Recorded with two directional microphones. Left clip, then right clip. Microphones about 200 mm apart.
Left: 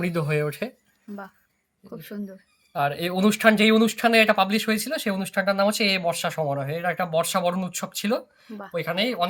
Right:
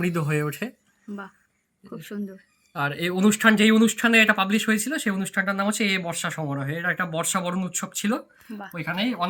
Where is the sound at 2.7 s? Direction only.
25° left (ahead or behind).